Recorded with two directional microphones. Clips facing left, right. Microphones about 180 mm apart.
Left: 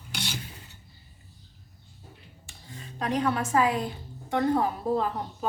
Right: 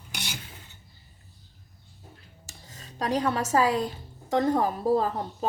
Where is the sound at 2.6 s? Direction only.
40° right (ahead or behind).